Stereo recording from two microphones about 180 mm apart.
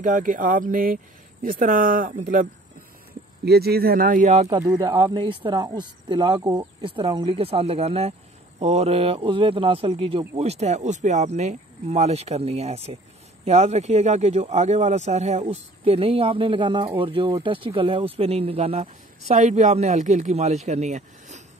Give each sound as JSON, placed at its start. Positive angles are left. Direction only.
{"t": 0.0, "sound": "speech", "side_deg": -50}
{"t": 3.4, "sound": "speech", "side_deg": -60}
{"t": 4.6, "sound": "speech", "side_deg": -20}